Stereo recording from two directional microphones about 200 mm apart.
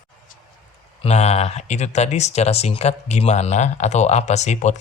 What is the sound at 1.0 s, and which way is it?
Speech, 35° left (ahead or behind).